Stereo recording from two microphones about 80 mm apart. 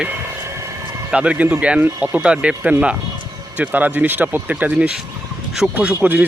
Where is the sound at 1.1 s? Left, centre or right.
Centre.